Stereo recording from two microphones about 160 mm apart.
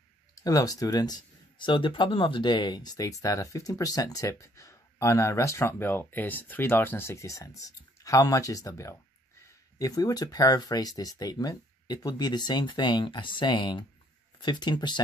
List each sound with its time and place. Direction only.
0.4 s speech: 20° left (ahead or behind)